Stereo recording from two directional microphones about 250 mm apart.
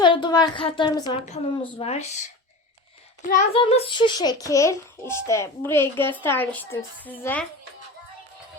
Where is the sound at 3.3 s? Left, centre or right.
Left.